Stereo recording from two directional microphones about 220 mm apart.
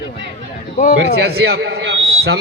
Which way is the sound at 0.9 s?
50° right (ahead or behind).